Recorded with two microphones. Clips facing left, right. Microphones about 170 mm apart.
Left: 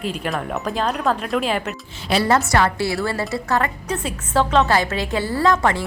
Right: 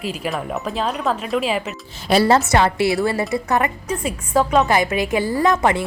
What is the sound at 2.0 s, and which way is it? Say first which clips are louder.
Speech: right 4 dB; 40° right (ahead or behind).